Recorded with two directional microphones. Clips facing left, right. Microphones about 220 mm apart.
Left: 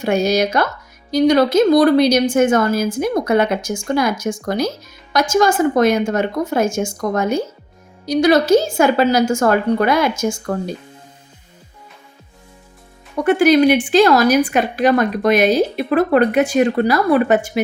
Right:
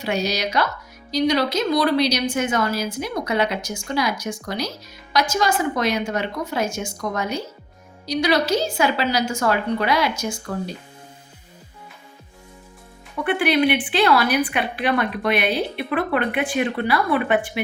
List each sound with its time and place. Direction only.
0.0 s a woman's voice: 50° left (ahead or behind)
13.1 s speech: 40° left (ahead or behind)